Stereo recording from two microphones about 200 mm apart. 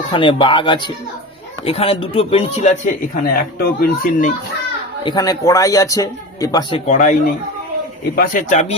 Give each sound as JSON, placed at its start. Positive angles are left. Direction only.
{"t": 0.1, "sound": "a man's voice", "side_deg": 25}
{"t": 3.6, "sound": "speech", "side_deg": 50}
{"t": 5.0, "sound": "a man's voice", "side_deg": 20}